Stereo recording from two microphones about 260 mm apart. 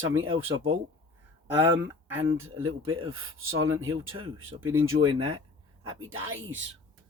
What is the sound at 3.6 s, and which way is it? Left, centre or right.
Speech, right.